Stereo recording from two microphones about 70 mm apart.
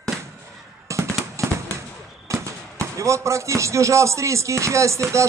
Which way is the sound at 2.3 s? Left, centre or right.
Right.